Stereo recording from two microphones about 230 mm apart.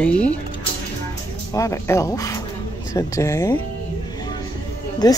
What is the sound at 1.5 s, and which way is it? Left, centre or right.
Speech, centre.